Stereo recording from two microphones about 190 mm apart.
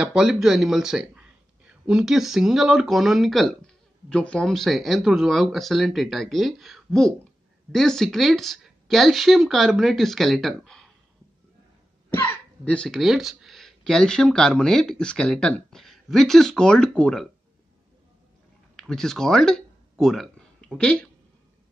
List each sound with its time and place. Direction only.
0.0 s speech: 5° right (ahead or behind)
12.1 s speech: 10° left (ahead or behind)
18.8 s speech: centre (ahead or behind)